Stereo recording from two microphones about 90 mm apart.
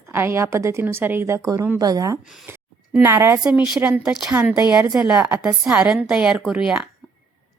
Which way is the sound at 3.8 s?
15° right (ahead or behind).